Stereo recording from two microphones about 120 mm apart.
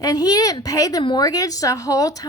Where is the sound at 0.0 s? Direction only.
30° left (ahead or behind).